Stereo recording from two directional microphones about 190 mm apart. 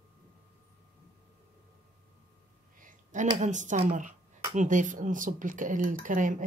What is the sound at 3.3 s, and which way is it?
Speech, 40° right (ahead or behind).